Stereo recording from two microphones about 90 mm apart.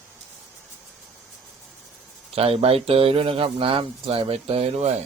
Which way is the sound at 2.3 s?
90° right.